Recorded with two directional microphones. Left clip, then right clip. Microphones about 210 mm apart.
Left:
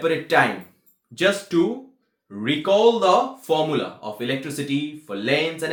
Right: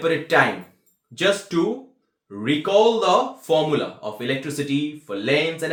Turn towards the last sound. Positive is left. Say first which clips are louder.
# right 1 dB
turn(degrees=5)  # may be behind; listen again after turning